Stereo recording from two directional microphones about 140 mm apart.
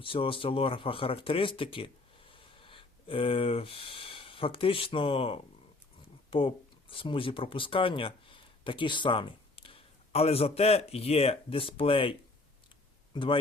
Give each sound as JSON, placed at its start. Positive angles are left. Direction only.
{"t": 0.0, "sound": "speech", "side_deg": 40}
{"t": 6.9, "sound": "speech", "side_deg": 40}
{"t": 13.1, "sound": "speech", "side_deg": 40}